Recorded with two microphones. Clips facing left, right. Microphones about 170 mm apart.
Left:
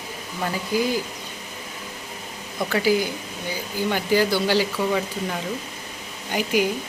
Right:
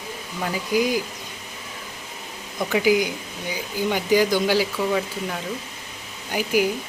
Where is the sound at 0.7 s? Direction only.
15° right (ahead or behind).